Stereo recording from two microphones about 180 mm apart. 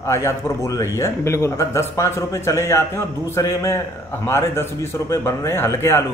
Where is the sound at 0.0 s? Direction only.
15° left (ahead or behind).